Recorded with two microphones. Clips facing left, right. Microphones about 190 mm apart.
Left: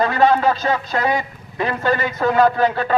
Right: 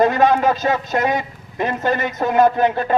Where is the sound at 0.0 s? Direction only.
20° right (ahead or behind).